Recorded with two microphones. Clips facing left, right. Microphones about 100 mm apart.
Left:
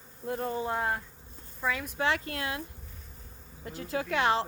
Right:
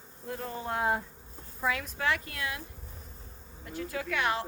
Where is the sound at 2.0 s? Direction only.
25° left (ahead or behind).